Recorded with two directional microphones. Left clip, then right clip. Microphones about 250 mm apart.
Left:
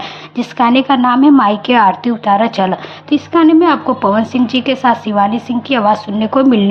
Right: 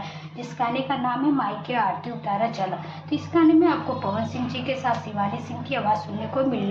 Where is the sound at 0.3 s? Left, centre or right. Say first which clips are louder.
Left 14 dB; left.